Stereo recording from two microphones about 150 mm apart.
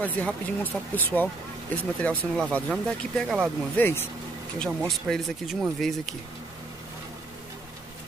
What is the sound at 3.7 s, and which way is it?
Speech, 15° left (ahead or behind).